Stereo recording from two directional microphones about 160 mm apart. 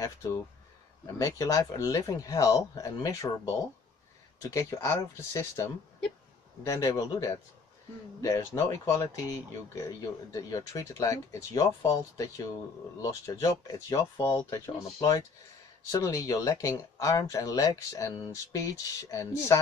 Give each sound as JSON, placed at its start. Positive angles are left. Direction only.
{"t": 0.0, "sound": "speech", "side_deg": 20}
{"t": 4.4, "sound": "speech", "side_deg": 20}